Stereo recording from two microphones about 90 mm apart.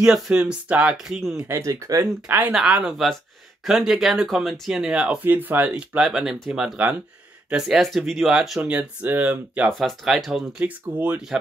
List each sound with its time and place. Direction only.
0.0 s speech: 10° right (ahead or behind)
1.5 s speech: 35° right (ahead or behind)
2.2 s speech: 20° right (ahead or behind)
2.5 s speech: 10° right (ahead or behind)
5.2 s speech: 20° right (ahead or behind)
9.7 s speech: centre (ahead or behind)
10.6 s speech: 15° right (ahead or behind)